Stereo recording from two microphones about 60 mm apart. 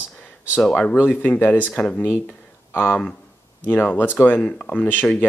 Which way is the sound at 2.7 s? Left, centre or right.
Left.